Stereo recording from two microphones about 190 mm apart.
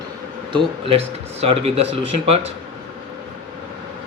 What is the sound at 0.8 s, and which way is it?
Speech, 30° right (ahead or behind).